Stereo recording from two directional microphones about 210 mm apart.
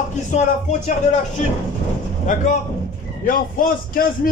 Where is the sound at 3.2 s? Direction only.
40° left (ahead or behind).